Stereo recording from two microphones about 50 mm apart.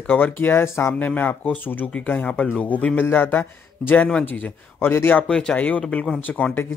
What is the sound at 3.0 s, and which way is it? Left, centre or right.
A man's voice, left.